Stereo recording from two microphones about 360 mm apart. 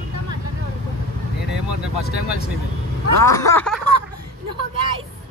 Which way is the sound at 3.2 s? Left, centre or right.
Centre.